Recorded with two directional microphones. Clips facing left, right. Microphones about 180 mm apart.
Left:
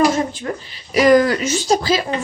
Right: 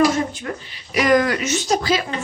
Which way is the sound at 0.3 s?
35° left (ahead or behind).